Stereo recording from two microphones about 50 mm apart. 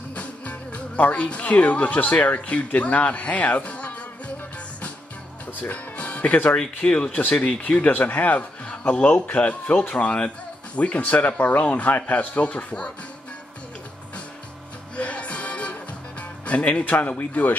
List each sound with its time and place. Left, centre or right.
0.1 s speech: left
5.5 s music: left
6.5 s speech: centre
7.6 s a man's voice: left
15.0 s music: left